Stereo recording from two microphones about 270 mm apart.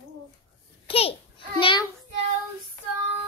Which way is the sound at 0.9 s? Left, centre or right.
Left.